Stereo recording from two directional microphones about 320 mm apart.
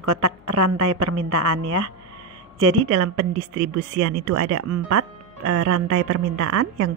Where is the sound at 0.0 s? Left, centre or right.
Right.